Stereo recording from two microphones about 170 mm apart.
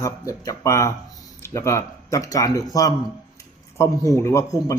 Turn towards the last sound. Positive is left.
turn(degrees=20)  # may be behind; listen again after turning